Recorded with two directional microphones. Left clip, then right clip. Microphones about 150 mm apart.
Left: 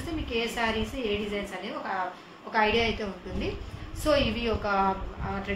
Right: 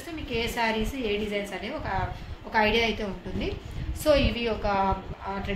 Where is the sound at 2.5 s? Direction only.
45° right (ahead or behind).